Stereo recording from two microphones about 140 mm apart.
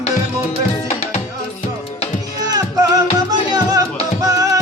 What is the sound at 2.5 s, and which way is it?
Music, 25° right (ahead or behind).